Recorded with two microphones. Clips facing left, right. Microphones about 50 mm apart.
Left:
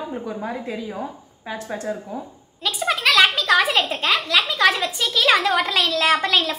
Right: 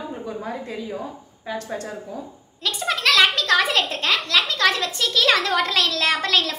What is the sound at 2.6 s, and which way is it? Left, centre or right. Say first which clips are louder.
A child's voice: left 2 dB; centre.